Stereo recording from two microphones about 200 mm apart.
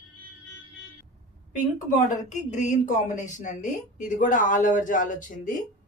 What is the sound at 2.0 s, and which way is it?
Speech, 40° left (ahead or behind).